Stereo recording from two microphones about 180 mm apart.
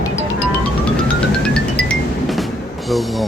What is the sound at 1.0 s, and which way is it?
Music, 5° left (ahead or behind).